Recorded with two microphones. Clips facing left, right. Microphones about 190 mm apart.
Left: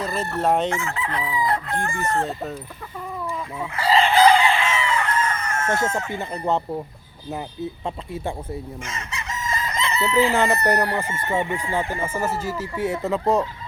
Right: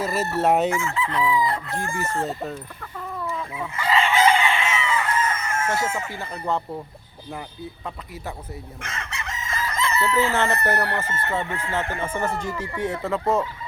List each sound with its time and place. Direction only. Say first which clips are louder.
0.0 s crowing: right 1 dB; 5° right (ahead or behind)
0.8 s chicken: right 3 dB; 60° left (ahead or behind)
2.2 s speech: even; centre (ahead or behind)
3.2 s chicken: even; 5° left (ahead or behind)
3.8 s chicken: left 4 dB; 35° left (ahead or behind)
5.3 s chicken: left 1 dB; 5° right (ahead or behind)
6.1 s speech: left 3 dB; 20° left (ahead or behind)
7.9 s speech: left 6 dB; 25° left (ahead or behind)
8.8 s chicken: left 1 dB; 60° right (ahead or behind)
9.6 s chicken: right 2 dB; 20° left (ahead or behind)
13.1 s speech: left 2 dB; 20° left (ahead or behind)